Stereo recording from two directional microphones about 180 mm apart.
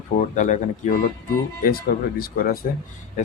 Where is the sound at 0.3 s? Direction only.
45° left (ahead or behind).